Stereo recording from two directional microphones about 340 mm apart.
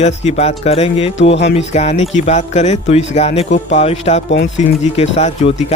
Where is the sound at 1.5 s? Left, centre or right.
Centre.